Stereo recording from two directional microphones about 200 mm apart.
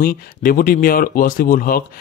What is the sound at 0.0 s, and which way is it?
Speech, 45° left (ahead or behind).